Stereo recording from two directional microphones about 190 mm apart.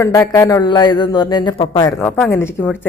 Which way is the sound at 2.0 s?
5° left (ahead or behind).